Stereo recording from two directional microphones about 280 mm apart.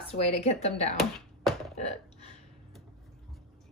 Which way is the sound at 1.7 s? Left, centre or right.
Left.